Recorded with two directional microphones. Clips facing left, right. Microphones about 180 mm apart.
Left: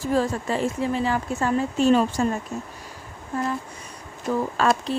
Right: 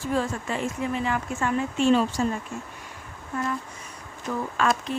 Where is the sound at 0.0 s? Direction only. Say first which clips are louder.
Left 4 dB; 35° left (ahead or behind).